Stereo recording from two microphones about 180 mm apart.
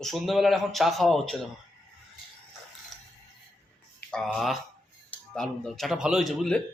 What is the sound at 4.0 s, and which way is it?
Speech, 5° left (ahead or behind).